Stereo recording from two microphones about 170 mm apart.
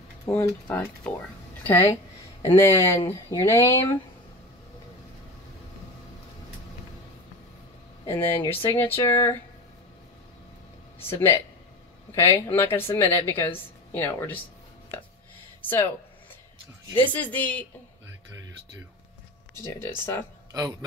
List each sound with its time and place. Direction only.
0.3 s speech: 10° left (ahead or behind)
8.0 s speech: 15° left (ahead or behind)
11.0 s speech: 15° left (ahead or behind)
15.6 s speech: 15° left (ahead or behind)
17.1 s speech: 10° left (ahead or behind)
19.6 s speech: 15° left (ahead or behind)